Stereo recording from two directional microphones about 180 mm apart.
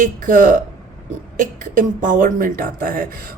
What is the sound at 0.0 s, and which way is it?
Speech, 45° right (ahead or behind).